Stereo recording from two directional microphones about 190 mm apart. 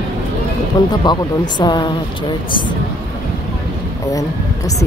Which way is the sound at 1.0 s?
20° left (ahead or behind).